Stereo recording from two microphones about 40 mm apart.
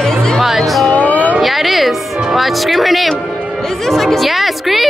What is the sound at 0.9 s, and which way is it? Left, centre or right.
Music, left.